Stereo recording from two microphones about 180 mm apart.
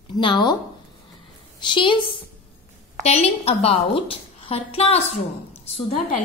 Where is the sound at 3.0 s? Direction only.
35° left (ahead or behind).